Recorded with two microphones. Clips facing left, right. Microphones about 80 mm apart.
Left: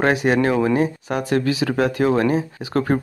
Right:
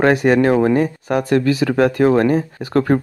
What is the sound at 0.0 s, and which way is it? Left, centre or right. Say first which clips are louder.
Speech: right 4 dB; right.